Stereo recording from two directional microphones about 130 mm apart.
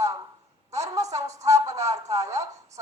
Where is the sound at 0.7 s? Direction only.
25° right (ahead or behind).